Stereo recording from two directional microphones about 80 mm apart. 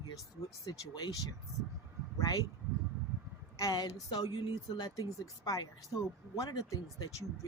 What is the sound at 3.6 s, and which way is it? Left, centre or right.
Speech, left.